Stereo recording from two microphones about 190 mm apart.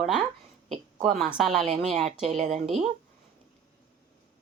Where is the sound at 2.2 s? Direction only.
35° right (ahead or behind).